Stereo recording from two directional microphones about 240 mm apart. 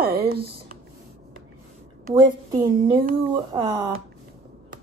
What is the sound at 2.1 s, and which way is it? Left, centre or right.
Speech, centre.